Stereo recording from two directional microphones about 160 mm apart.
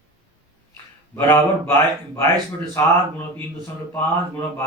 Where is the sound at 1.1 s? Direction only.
15° left (ahead or behind).